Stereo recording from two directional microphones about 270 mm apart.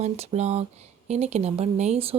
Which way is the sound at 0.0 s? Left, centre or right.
Right.